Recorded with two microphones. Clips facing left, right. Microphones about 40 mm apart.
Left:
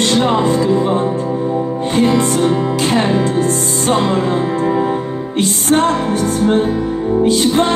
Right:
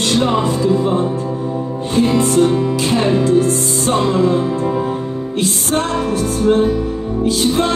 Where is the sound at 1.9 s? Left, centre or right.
Left.